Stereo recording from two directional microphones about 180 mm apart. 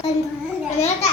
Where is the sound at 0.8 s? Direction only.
35° left (ahead or behind).